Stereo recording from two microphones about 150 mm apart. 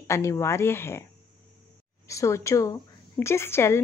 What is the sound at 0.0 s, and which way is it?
Speech, 20° left (ahead or behind).